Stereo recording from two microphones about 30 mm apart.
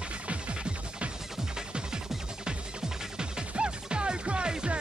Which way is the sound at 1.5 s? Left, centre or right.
Right.